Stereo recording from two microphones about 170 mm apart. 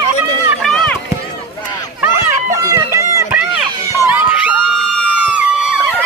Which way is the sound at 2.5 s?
20° right (ahead or behind).